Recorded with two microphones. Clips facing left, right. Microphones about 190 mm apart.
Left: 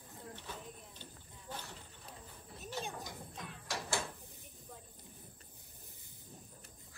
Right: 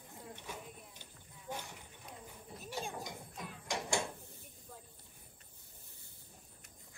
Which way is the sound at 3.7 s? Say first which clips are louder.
Right 3 dB; 15° right (ahead or behind).